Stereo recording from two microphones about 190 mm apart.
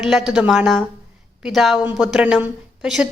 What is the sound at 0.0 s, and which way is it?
A woman's voice, centre (ahead or behind).